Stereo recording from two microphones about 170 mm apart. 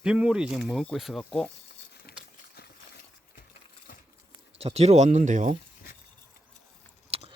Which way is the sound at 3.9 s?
55° left (ahead or behind).